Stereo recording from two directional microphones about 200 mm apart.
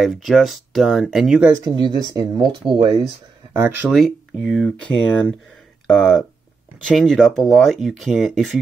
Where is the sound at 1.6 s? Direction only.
20° right (ahead or behind).